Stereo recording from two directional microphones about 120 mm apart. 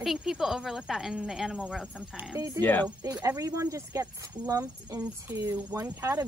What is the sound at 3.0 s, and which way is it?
Speech, 25° right (ahead or behind).